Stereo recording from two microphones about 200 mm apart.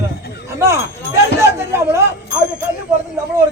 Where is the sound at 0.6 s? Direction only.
15° right (ahead or behind).